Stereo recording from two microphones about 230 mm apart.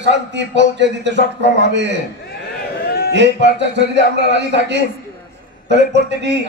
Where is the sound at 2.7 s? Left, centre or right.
Left.